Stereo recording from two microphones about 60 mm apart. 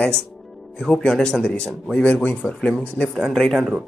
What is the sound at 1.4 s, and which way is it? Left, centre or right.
Speech, left.